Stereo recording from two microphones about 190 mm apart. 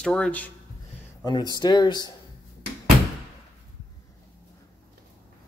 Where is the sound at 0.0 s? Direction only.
5° left (ahead or behind).